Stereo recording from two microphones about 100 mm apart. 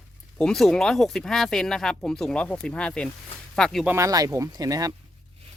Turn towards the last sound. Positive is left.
turn(degrees=-35)  # may be behind; listen again after turning